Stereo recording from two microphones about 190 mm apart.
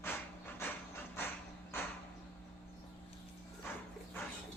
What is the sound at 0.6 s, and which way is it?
Wood, 10° left (ahead or behind).